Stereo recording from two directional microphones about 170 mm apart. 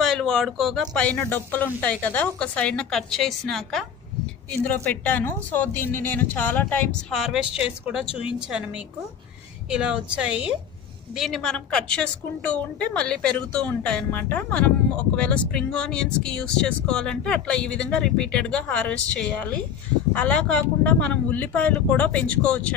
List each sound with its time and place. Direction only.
0.0 s a woman's voice: centre (ahead or behind)
8.1 s speech: 30° left (ahead or behind)
8.4 s a woman's voice: 5° right (ahead or behind)